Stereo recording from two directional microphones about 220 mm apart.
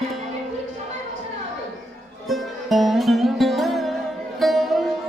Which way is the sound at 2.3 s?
Centre (ahead or behind).